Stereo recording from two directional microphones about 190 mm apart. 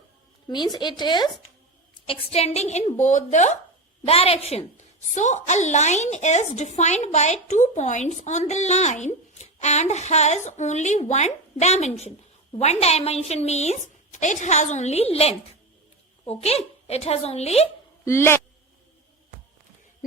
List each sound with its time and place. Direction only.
0.4 s a woman's voice: 20° left (ahead or behind)
18.0 s speech: 15° left (ahead or behind)